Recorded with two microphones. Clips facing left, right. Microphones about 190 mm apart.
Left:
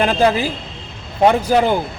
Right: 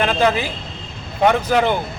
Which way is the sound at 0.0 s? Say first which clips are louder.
Left 2 dB; 35° left (ahead or behind).